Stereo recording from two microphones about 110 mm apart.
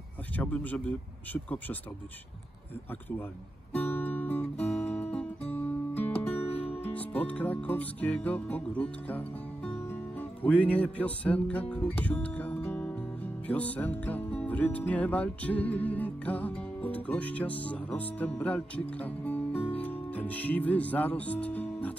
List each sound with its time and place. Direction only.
0.4 s speech: 15° left (ahead or behind)
2.9 s speech: 15° left (ahead or behind)
3.7 s music: 15° left (ahead or behind)